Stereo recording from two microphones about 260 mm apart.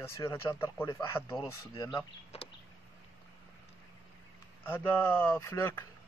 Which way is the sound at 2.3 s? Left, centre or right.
Left.